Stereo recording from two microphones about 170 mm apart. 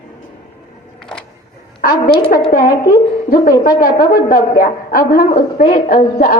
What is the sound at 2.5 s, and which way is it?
A woman's voice, 55° left (ahead or behind).